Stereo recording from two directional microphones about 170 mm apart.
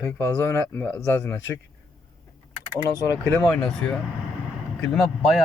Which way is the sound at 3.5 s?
5° left (ahead or behind).